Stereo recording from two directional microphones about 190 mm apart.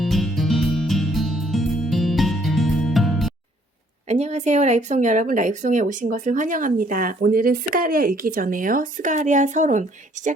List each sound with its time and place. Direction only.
0.0 s music: centre (ahead or behind)
4.1 s speech: 35° right (ahead or behind)